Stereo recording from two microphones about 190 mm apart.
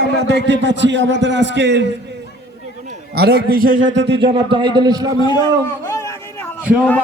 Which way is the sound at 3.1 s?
55° right (ahead or behind).